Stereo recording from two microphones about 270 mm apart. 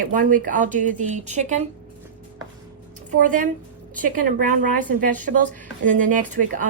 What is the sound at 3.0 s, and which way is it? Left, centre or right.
Speech, right.